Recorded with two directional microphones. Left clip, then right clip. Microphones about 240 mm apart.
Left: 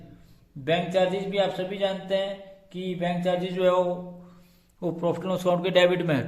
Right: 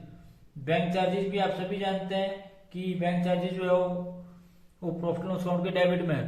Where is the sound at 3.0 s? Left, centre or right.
Left.